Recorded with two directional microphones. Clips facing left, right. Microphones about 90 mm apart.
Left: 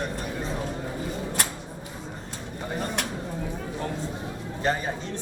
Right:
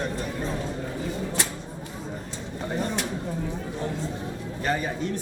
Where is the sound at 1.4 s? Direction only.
55° left (ahead or behind).